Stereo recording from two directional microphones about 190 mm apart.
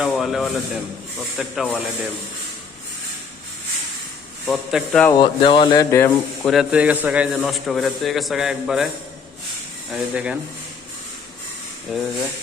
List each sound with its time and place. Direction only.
0.0 s a man's voice: centre (ahead or behind)
4.4 s a man's voice: centre (ahead or behind)
5.2 s speech: 25° left (ahead or behind)
5.9 s speech: 10° left (ahead or behind)
6.5 s a man's voice: 5° right (ahead or behind)
9.9 s a man's voice: 5° right (ahead or behind)
11.9 s a man's voice: centre (ahead or behind)